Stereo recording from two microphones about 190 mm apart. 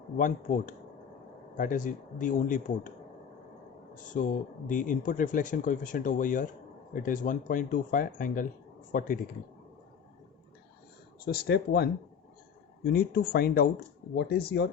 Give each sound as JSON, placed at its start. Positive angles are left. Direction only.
{"t": 0.2, "sound": "speech", "side_deg": 45}
{"t": 3.9, "sound": "speech", "side_deg": 40}
{"t": 11.3, "sound": "speech", "side_deg": 55}